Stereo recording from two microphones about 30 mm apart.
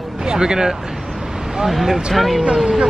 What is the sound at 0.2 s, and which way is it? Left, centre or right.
Speech, right.